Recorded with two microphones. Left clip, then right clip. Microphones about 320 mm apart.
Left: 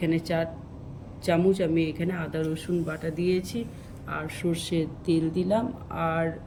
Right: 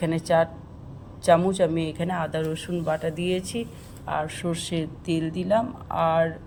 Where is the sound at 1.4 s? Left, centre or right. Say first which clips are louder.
Right 1 dB; centre.